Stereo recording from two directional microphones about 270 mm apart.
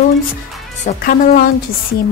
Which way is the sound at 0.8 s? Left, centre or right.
Left.